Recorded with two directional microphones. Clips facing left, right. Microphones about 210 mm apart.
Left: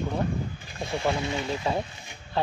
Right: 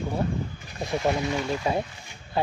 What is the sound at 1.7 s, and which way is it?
Speech, 15° right (ahead or behind).